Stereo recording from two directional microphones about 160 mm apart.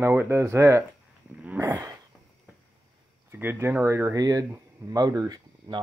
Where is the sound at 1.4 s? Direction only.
15° right (ahead or behind).